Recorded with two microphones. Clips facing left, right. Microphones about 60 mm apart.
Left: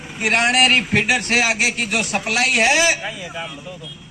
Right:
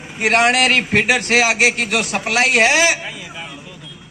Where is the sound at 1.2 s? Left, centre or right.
Right.